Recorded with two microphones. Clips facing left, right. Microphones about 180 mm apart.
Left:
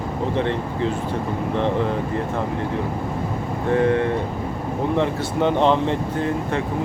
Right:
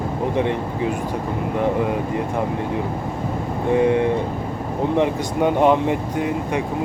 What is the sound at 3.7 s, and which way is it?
Speech, 15° right (ahead or behind).